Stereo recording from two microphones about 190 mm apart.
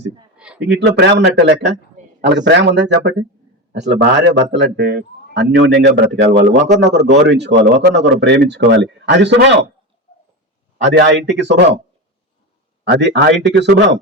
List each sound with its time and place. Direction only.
0.3 s a sound: 5° right (ahead or behind)
0.6 s a man's voice: 65° right (ahead or behind)
10.8 s speech: 65° right (ahead or behind)
12.8 s a man's voice: 65° right (ahead or behind)